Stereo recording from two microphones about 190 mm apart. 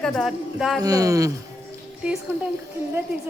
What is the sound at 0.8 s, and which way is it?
Speech, 20° right (ahead or behind).